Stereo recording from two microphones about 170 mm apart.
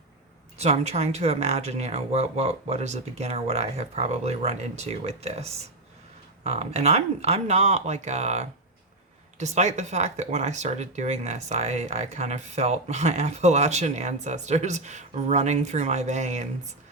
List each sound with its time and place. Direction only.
0.6 s speech: 40° right (ahead or behind)